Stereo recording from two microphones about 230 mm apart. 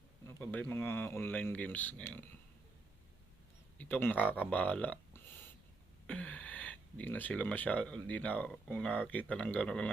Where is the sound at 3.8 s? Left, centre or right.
Centre.